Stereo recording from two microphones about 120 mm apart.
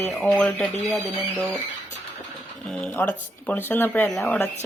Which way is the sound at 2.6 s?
Centre (ahead or behind).